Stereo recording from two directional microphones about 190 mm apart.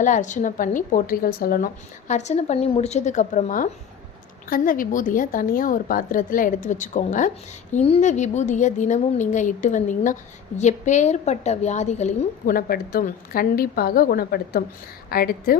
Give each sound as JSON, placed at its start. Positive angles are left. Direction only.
{"t": 0.0, "sound": "a woman's voice", "side_deg": 40}